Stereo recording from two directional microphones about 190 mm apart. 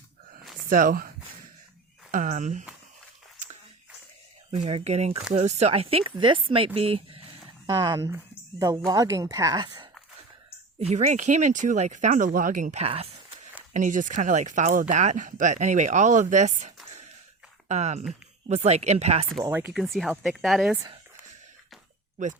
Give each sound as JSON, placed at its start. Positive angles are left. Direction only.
{"t": 0.7, "sound": "speech", "side_deg": -45}
{"t": 2.1, "sound": "speech", "side_deg": -40}
{"t": 4.5, "sound": "speech", "side_deg": -35}
{"t": 10.8, "sound": "speech", "side_deg": -35}
{"t": 13.7, "sound": "speech", "side_deg": -40}
{"t": 19.5, "sound": "speech", "side_deg": -10}
{"t": 20.7, "sound": "speech", "side_deg": -20}